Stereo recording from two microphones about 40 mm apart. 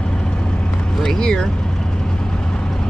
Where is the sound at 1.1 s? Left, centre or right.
Left.